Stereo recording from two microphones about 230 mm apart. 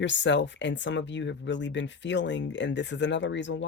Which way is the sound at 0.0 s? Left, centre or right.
Left.